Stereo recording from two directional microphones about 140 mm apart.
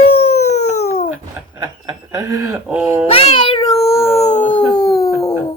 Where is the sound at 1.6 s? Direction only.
25° right (ahead or behind).